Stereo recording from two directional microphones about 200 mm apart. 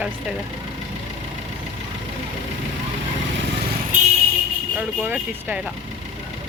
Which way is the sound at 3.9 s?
40° right (ahead or behind).